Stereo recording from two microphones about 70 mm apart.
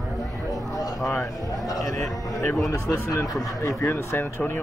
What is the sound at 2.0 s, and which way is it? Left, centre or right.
Speech, centre.